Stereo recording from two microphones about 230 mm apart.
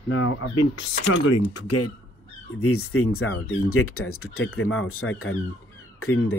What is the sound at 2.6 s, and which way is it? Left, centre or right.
Speech, left.